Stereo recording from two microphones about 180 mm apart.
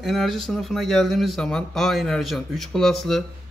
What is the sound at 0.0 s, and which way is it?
Speech, centre (ahead or behind).